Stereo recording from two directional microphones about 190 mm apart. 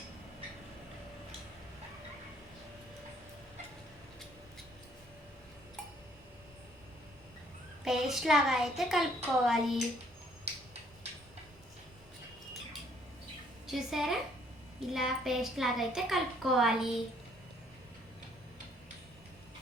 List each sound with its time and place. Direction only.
7.9 s a child's voice: centre (ahead or behind)
13.7 s a woman's voice: centre (ahead or behind)